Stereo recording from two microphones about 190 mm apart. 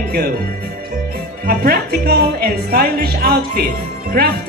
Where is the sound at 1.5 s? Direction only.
50° right (ahead or behind).